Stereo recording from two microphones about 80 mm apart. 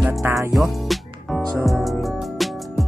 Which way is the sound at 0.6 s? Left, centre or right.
Centre.